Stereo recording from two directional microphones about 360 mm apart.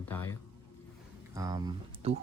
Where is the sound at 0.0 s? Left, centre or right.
Centre.